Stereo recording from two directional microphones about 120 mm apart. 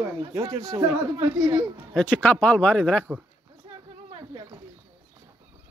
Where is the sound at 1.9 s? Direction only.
10° left (ahead or behind).